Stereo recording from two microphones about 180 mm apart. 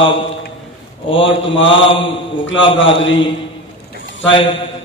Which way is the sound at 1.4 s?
90° left.